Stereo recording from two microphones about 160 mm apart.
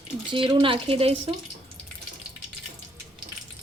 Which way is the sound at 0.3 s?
35° right (ahead or behind).